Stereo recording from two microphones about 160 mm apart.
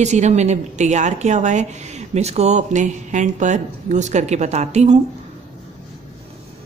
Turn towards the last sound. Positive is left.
turn(degrees=-45)  # may be behind; listen again after turning